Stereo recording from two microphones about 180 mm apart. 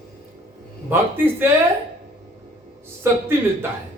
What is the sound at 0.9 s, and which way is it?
Speech, 10° right (ahead or behind).